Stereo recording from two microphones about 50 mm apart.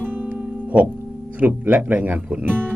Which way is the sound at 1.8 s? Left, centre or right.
Right.